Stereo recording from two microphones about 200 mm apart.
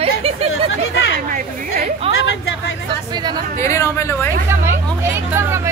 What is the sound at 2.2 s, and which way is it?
Speech, 65° left (ahead or behind).